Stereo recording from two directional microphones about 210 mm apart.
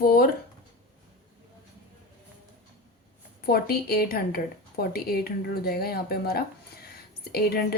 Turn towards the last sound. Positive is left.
turn(degrees=50)  # may be behind; listen again after turning